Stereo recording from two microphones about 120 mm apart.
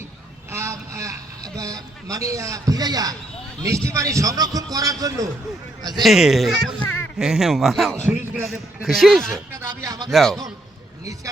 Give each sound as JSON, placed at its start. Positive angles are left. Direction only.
{"t": 0.5, "sound": "vehicle", "side_deg": -25}
{"t": 1.5, "sound": "a man's voice", "side_deg": -30}
{"t": 6.0, "sound": "a man's voice", "side_deg": 0}
{"t": 7.9, "sound": "a man's voice", "side_deg": -20}
{"t": 8.4, "sound": "a man's voice", "side_deg": 0}
{"t": 9.3, "sound": "speech", "side_deg": -30}
{"t": 10.1, "sound": "a man's voice", "side_deg": 0}